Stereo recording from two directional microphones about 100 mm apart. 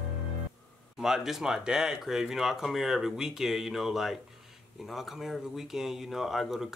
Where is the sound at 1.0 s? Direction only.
5° right (ahead or behind).